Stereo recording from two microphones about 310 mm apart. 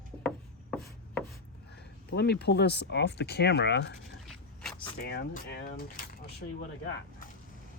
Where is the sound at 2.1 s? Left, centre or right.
Left.